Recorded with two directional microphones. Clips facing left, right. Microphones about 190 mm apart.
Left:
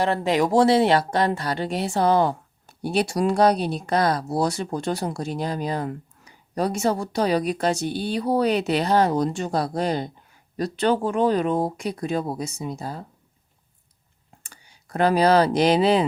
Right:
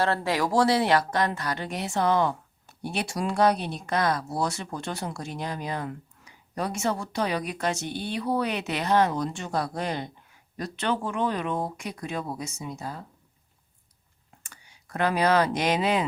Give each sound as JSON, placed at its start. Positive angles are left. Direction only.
{"t": 0.0, "sound": "speech", "side_deg": 20}
{"t": 14.4, "sound": "speech", "side_deg": 30}